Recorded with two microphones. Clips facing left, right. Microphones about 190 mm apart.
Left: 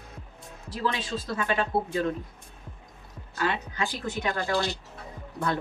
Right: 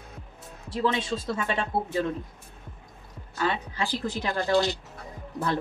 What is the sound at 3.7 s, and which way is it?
Speech, 30° right (ahead or behind).